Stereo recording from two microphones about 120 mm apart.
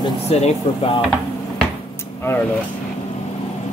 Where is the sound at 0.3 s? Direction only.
60° left (ahead or behind).